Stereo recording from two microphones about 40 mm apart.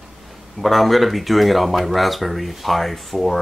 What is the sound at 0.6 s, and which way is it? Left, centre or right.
Speech, centre.